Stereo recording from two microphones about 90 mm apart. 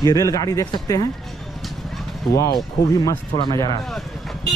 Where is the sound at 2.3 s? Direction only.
35° left (ahead or behind).